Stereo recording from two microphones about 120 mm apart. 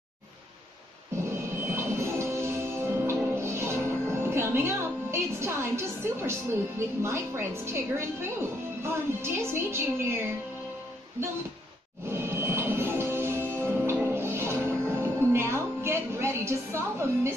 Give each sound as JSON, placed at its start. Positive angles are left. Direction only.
{"t": 1.3, "sound": "music", "side_deg": -20}
{"t": 7.0, "sound": "a woman's voice", "side_deg": -20}
{"t": 12.1, "sound": "music", "side_deg": -20}